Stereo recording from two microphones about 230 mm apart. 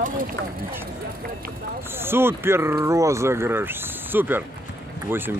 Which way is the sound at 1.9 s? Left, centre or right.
Centre.